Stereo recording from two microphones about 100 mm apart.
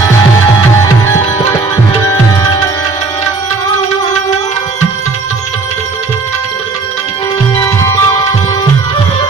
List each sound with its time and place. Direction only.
2.0 s music: 35° left (ahead or behind)
7.5 s music: 30° left (ahead or behind)